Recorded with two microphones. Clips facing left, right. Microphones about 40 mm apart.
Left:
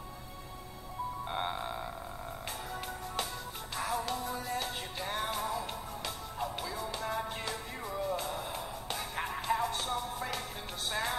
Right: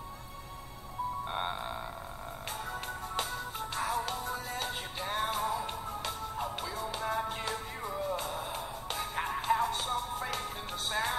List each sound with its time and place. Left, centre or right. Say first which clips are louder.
1.3 s frog: even; centre
3.7 s music: even; centre